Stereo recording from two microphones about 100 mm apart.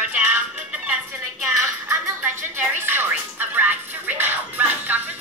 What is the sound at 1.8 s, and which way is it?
Music, 20° right (ahead or behind).